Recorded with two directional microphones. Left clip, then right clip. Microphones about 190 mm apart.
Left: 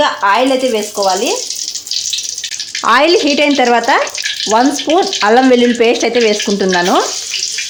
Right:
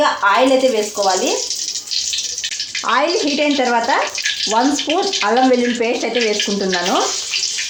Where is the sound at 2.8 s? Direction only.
50° left (ahead or behind).